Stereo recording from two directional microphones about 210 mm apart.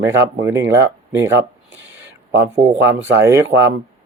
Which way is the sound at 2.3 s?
60° right (ahead or behind).